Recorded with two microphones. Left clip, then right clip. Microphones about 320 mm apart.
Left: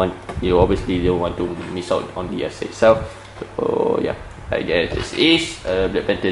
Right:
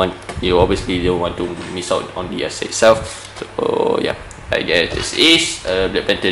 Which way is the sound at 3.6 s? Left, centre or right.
Left.